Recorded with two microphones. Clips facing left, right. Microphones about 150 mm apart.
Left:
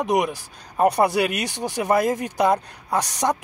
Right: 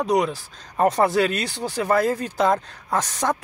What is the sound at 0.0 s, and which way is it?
Speech, 20° left (ahead or behind).